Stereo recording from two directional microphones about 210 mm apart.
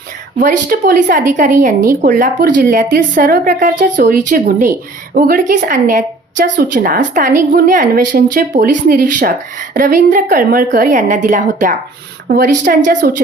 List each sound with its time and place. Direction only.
0.3 s speech: 40° right (ahead or behind)